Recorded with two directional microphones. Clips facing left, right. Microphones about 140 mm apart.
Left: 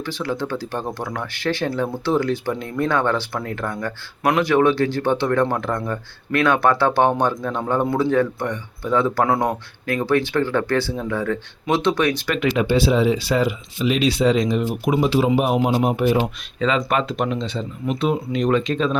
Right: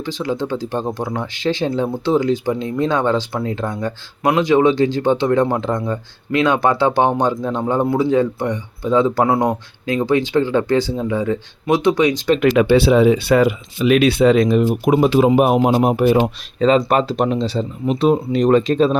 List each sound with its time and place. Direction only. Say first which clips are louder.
0.0 s speech: right 3 dB; 15° right (ahead or behind)
12.5 s speech: right 5 dB; 70° right (ahead or behind); by 18.9 s 40° right (ahead or behind)